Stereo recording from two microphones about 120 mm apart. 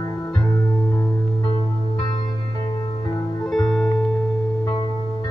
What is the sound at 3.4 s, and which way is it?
Music, 5° left (ahead or behind).